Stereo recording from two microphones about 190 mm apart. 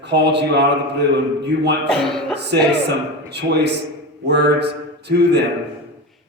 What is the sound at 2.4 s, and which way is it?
Speech, 65° right (ahead or behind).